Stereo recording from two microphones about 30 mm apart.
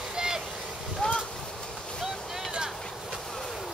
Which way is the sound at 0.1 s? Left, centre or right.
Right.